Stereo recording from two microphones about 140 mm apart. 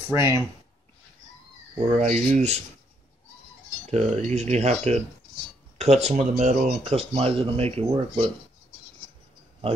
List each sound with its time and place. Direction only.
0.1 s speech: 20° right (ahead or behind)
2.0 s speech: 50° right (ahead or behind)
3.9 s speech: 55° right (ahead or behind)